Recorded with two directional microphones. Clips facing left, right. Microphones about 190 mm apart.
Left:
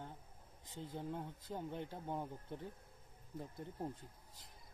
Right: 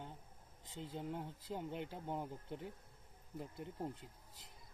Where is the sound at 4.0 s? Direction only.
25° right (ahead or behind).